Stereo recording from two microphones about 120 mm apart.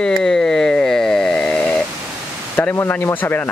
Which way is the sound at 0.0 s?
5° left (ahead or behind).